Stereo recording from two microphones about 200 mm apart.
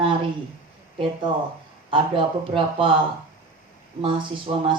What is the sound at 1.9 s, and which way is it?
Speech, 25° right (ahead or behind).